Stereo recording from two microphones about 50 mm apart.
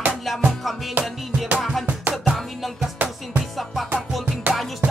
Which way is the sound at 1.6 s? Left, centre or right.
Centre.